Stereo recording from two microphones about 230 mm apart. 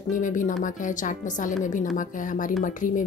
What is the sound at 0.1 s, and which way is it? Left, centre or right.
A woman's voice, left.